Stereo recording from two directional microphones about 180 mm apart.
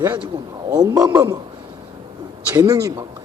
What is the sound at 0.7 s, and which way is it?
Speech, 20° right (ahead or behind).